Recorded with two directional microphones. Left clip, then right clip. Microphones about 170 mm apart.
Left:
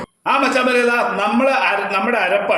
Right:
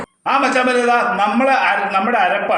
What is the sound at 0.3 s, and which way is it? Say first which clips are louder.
Speech: right 1 dB; 25° left (ahead or behind).